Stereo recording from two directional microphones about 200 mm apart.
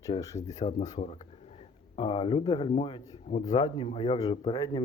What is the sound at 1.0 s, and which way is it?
Speech, 40° left (ahead or behind).